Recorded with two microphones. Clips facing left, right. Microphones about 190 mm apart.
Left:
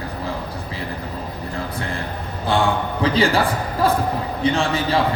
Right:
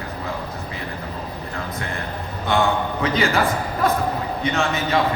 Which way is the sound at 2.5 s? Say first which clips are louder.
Even; 30° left (ahead or behind).